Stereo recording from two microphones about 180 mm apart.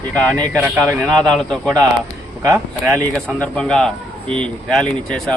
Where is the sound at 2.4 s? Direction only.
15° right (ahead or behind).